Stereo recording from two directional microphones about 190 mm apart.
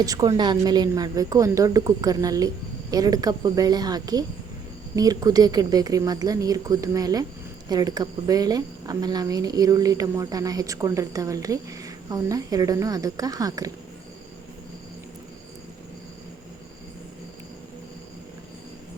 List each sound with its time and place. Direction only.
0.0 s speech: 20° right (ahead or behind)